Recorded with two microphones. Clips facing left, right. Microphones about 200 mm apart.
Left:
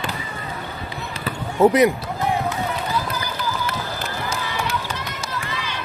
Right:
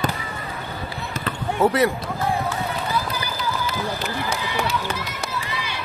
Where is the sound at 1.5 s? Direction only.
20° left (ahead or behind).